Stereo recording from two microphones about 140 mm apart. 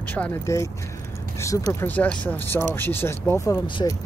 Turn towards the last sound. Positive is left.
turn(degrees=30)  # may be behind; listen again after turning